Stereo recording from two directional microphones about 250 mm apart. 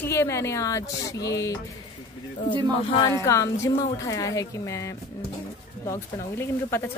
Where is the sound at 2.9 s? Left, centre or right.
Centre.